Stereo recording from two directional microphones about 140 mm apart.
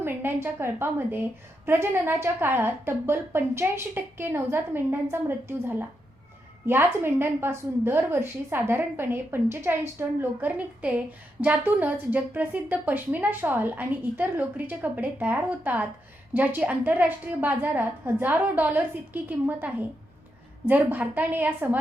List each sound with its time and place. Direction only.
0.0 s a woman's voice: 15° right (ahead or behind)